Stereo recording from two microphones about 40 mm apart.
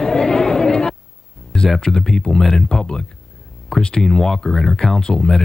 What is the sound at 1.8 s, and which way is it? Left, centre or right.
Speech, centre.